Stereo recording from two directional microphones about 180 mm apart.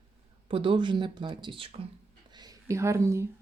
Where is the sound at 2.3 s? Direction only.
20° right (ahead or behind).